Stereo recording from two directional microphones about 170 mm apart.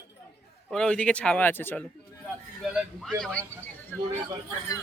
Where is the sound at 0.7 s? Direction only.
5° left (ahead or behind).